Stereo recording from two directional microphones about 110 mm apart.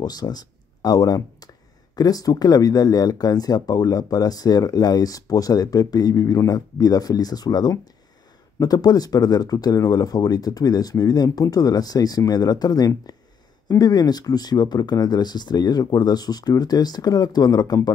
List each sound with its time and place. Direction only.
0.0 s speech: 40° left (ahead or behind)